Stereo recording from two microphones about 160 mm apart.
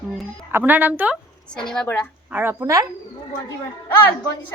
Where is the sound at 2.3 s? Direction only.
10° right (ahead or behind).